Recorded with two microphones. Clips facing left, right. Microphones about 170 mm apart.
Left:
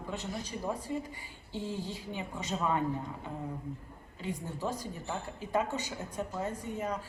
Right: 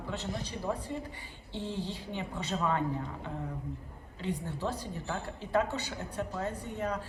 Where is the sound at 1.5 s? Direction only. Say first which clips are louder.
Even; 40° left (ahead or behind).